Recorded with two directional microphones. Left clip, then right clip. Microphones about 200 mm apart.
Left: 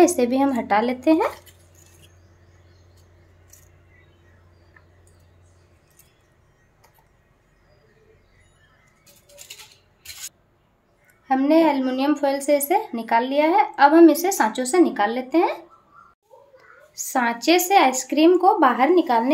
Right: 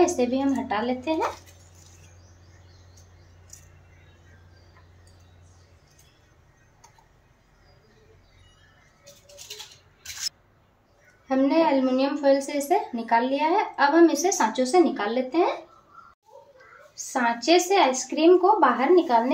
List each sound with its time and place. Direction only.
0.0 s a woman's voice: 50° left (ahead or behind)
11.2 s a woman's voice: 40° left (ahead or behind)
16.9 s a woman's voice: 40° left (ahead or behind)